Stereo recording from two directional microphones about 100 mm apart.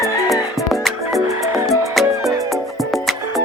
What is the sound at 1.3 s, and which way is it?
Music, 35° right (ahead or behind).